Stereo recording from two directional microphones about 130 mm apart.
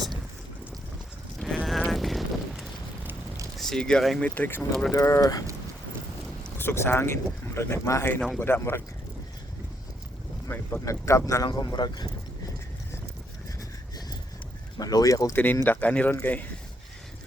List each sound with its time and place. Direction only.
1.4 s a sound: centre (ahead or behind)
1.9 s wind: centre (ahead or behind)
3.0 s a sound: 20° right (ahead or behind)
3.6 s speech: 5° left (ahead or behind)
4.4 s speech: 15° left (ahead or behind)
6.6 s speech: 15° left (ahead or behind)
10.5 s speech: 15° left (ahead or behind)
11.4 s speech: 35° left (ahead or behind)
13.6 s vehicle: 30° left (ahead or behind)
14.8 s speech: 30° left (ahead or behind)